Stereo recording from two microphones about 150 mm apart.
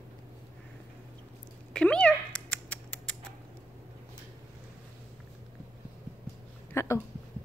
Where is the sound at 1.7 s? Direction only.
5° left (ahead or behind).